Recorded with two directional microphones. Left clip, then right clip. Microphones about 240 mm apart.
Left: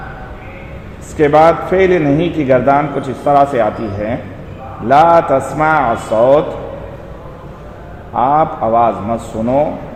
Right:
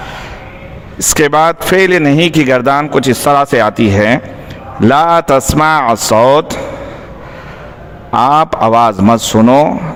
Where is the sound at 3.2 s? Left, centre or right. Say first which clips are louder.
Left 1 dB; right.